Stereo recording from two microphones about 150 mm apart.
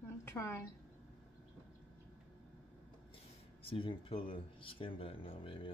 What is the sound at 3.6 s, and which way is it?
Speech, 35° left (ahead or behind).